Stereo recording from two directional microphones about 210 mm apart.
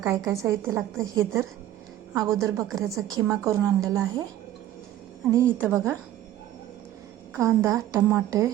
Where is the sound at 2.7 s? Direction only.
15° right (ahead or behind).